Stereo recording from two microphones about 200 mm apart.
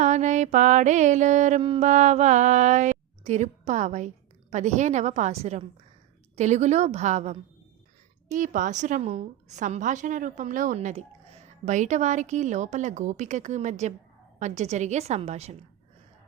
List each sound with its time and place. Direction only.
0.0 s a woman's voice: 35° right (ahead or behind)